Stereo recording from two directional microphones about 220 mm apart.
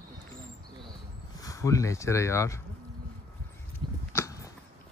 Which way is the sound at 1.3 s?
15° left (ahead or behind).